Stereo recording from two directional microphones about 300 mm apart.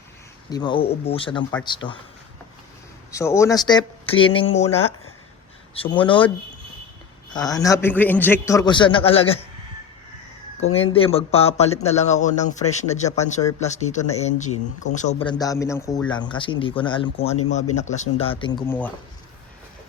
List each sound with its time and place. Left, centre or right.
0.5 s a man's voice: centre
3.1 s a man's voice: centre
7.3 s a man's voice: centre
10.6 s a man's voice: left